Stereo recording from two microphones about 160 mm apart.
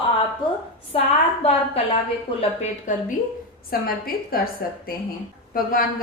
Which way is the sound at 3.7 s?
65° left (ahead or behind).